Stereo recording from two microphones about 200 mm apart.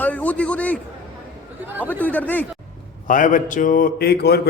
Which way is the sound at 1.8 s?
10° left (ahead or behind).